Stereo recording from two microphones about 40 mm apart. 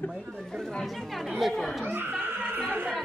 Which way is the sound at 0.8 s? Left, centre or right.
Centre.